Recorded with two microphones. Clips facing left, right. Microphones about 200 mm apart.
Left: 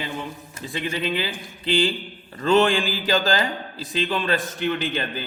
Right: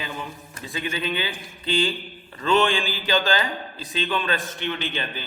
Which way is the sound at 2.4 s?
40° left (ahead or behind).